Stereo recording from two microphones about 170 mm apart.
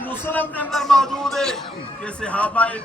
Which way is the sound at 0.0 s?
10° left (ahead or behind).